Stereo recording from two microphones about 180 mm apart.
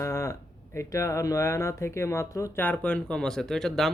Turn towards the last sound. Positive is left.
turn(degrees=0)  # may be behind; listen again after turning